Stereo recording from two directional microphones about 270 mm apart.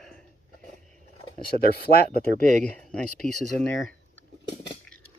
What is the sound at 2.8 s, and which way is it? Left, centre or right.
Speech, centre.